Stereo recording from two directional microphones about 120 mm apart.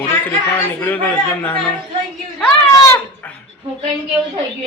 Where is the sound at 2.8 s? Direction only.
20° left (ahead or behind).